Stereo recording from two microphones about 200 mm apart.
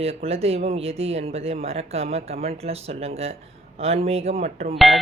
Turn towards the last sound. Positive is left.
turn(degrees=0)  # may be behind; listen again after turning